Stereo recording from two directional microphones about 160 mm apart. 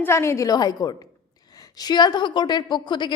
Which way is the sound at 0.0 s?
15° left (ahead or behind).